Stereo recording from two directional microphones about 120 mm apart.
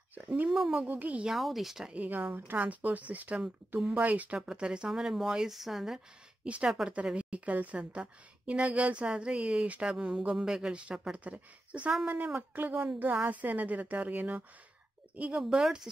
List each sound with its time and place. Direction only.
0.4 s a woman's voice: 5° right (ahead or behind)